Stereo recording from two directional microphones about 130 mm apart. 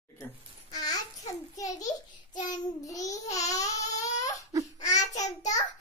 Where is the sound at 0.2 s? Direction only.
30° left (ahead or behind).